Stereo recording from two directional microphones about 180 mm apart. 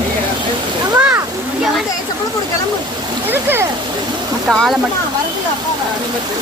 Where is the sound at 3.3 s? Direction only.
10° right (ahead or behind).